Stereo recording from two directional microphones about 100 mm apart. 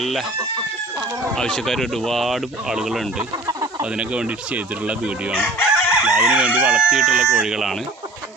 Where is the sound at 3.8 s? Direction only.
10° right (ahead or behind).